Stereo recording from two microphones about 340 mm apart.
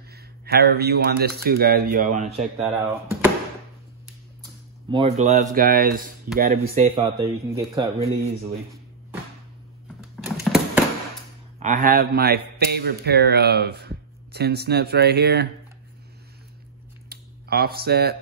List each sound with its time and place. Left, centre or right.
0.1 s a man's voice: right
2.6 s speech: centre
4.8 s a man's voice: centre
7.0 s speech: centre
9.9 s a sound: centre
11.6 s a man's voice: right
17.1 s a sound: right